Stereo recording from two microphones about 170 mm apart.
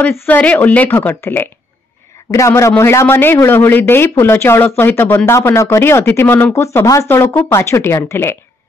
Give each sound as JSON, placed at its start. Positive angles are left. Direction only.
{"t": 0.0, "sound": "speech", "side_deg": 10}